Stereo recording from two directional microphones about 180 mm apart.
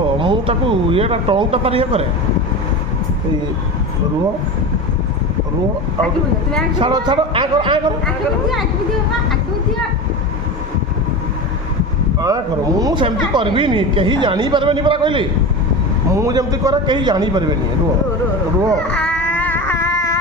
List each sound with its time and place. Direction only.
0.2 s speech: 30° right (ahead or behind)
6.8 s speech: 25° right (ahead or behind)
12.2 s speech: 20° right (ahead or behind)
18.8 s baby cry: 5° left (ahead or behind)